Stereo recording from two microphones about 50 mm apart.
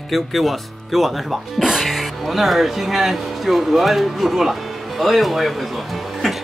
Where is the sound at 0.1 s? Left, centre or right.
Centre.